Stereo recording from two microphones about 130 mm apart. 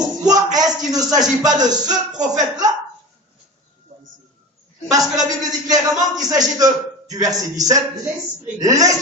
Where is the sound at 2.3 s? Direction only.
30° right (ahead or behind).